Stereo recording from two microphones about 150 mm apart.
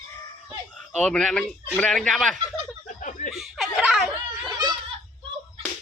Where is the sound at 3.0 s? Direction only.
60° left (ahead or behind).